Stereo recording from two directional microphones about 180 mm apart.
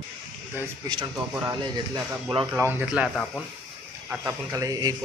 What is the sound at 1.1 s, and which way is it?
Speech, 10° right (ahead or behind).